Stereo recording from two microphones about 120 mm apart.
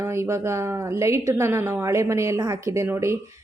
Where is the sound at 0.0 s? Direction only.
20° right (ahead or behind).